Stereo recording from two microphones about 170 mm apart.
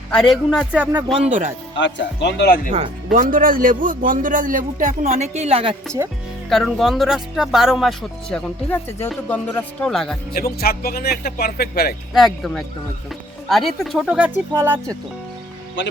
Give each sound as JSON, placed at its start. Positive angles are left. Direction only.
{"t": 0.1, "sound": "speech", "side_deg": 0}
{"t": 1.7, "sound": "speech", "side_deg": 90}
{"t": 3.1, "sound": "a man's voice", "side_deg": -55}
{"t": 6.5, "sound": "speech", "side_deg": 0}
{"t": 10.3, "sound": "speech", "side_deg": 65}
{"t": 12.1, "sound": "speech", "side_deg": 0}